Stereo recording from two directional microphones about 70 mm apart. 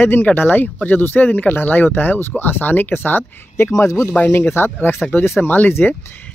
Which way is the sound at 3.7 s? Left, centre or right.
Left.